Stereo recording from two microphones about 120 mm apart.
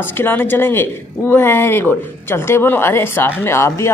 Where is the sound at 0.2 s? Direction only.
15° left (ahead or behind).